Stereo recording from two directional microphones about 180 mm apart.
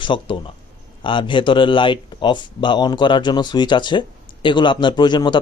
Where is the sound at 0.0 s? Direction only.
25° left (ahead or behind).